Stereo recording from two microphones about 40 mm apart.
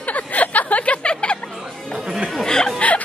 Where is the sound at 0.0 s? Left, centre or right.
Left.